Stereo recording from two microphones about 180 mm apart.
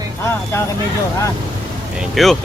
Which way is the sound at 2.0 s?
Centre (ahead or behind).